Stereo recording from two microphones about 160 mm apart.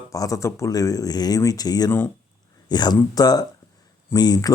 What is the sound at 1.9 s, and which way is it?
Speech, 15° left (ahead or behind).